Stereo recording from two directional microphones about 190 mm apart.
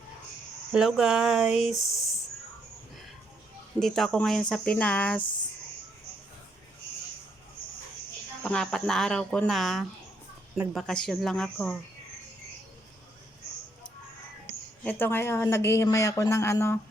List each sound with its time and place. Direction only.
0.7 s speech: 5° right (ahead or behind)
3.8 s speech: centre (ahead or behind)
5.2 s speech: 25° left (ahead or behind)
8.4 s speech: 5° left (ahead or behind)
14.8 s a man's voice: 10° left (ahead or behind)